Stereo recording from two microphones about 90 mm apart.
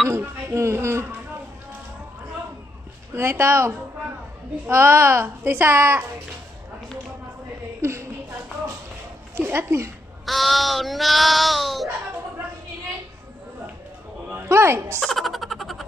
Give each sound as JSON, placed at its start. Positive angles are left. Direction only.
{"t": 0.1, "sound": "a child's voice", "side_deg": -30}
{"t": 3.2, "sound": "a child's voice", "side_deg": -30}
{"t": 7.8, "sound": "a sound", "side_deg": -30}
{"t": 9.4, "sound": "a child's voice", "side_deg": -25}
{"t": 10.2, "sound": "child singing", "side_deg": 0}
{"t": 14.3, "sound": "a woman's voice", "side_deg": -30}
{"t": 15.0, "sound": "a sound", "side_deg": 0}